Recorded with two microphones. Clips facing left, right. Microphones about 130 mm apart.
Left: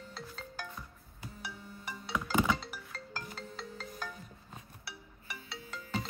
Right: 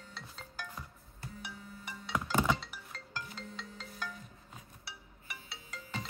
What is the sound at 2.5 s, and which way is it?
Music, 40° left (ahead or behind).